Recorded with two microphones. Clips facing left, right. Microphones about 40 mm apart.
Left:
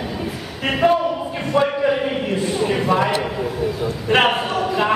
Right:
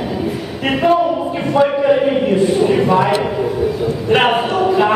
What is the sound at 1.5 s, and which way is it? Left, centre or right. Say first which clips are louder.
A man's voice: right 5 dB; centre.